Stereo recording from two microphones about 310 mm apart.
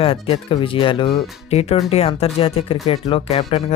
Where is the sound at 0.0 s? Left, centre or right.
Centre.